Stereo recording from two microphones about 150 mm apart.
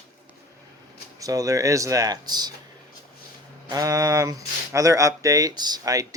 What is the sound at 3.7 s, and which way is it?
Speech, 20° right (ahead or behind).